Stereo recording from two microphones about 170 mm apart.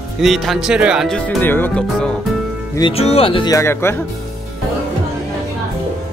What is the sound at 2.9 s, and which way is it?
Speech, 35° left (ahead or behind).